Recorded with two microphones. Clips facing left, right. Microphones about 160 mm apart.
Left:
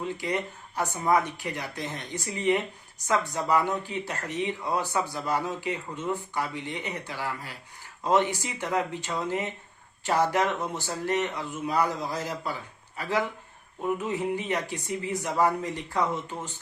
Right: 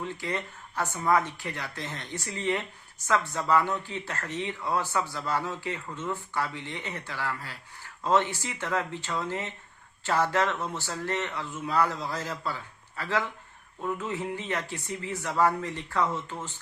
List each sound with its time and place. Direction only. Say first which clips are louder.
0.0 s speech: left 3 dB; 15° left (ahead or behind)